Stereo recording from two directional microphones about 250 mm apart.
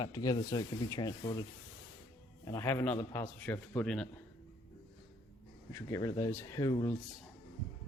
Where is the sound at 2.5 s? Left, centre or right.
Centre.